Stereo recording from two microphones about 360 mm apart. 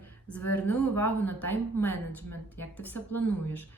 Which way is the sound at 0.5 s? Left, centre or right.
Centre.